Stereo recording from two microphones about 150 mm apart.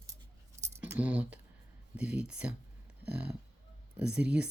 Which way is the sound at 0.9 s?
10° right (ahead or behind).